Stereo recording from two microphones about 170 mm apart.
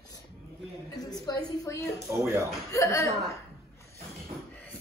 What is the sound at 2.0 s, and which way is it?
Speech, 15° right (ahead or behind).